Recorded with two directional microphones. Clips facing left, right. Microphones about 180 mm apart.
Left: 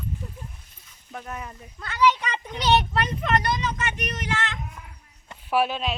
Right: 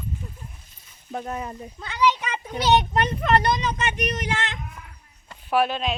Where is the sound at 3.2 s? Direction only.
35° right (ahead or behind).